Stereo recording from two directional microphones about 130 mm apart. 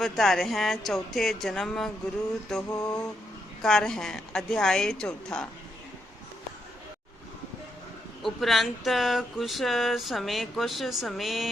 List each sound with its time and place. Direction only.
0.0 s speech: centre (ahead or behind)
2.6 s mantra: 30° left (ahead or behind)
3.6 s speech: 5° left (ahead or behind)
8.2 s speech: centre (ahead or behind)